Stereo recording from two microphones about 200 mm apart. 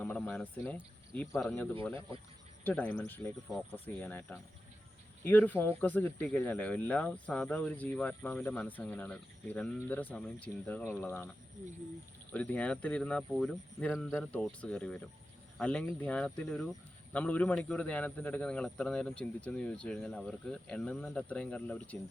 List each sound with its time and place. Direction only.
0.0 s speech: 10° left (ahead or behind)
2.6 s speech: 10° left (ahead or behind)
12.3 s speech: 5° left (ahead or behind)